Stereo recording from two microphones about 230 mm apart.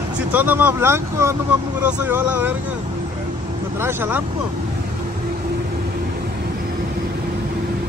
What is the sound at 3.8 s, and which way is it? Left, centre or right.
Speech, centre.